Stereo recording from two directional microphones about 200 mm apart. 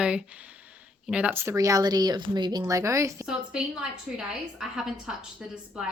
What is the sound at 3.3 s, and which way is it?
A woman's voice, 5° right (ahead or behind).